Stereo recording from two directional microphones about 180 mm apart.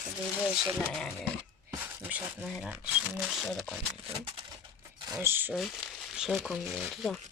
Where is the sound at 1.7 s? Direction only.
10° right (ahead or behind).